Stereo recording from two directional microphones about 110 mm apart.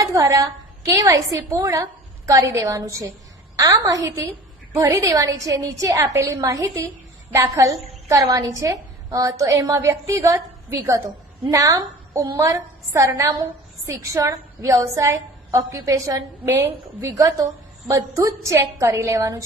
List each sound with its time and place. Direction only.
0.0 s a woman's voice: 30° right (ahead or behind)